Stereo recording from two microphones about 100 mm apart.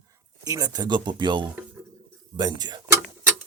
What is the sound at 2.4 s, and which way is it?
Speech, 40° right (ahead or behind).